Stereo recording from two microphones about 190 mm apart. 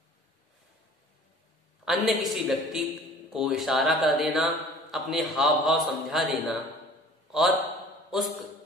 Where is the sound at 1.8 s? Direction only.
Centre (ahead or behind).